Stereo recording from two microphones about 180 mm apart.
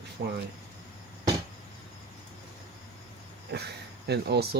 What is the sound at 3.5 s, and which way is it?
Speech, 65° right (ahead or behind).